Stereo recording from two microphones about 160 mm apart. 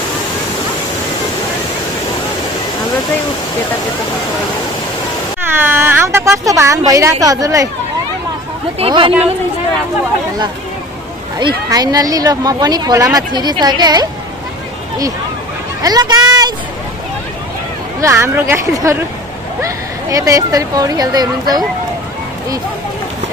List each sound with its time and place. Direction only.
5.5 s speech: 15° right (ahead or behind)
8.8 s speech: 30° right (ahead or behind)
11.3 s speech: 25° right (ahead or behind)
15.8 s a sound: 25° right (ahead or behind)
18.0 s speech: 15° right (ahead or behind)